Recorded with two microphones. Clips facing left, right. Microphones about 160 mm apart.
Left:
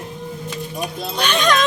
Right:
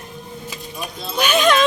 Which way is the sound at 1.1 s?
10° right (ahead or behind).